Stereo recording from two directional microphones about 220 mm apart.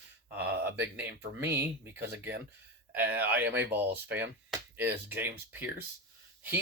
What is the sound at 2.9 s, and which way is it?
Speech, 10° right (ahead or behind).